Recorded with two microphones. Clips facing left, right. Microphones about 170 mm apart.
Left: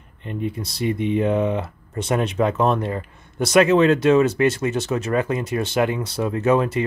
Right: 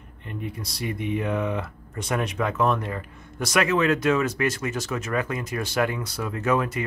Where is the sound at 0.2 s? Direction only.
25° left (ahead or behind).